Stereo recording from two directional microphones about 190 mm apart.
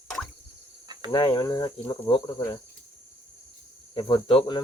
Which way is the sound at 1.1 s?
25° left (ahead or behind).